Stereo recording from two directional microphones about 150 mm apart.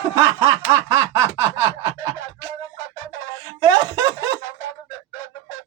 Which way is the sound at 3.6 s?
20° right (ahead or behind).